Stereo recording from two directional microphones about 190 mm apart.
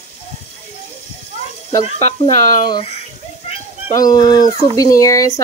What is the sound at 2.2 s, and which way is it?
Speech, 30° left (ahead or behind).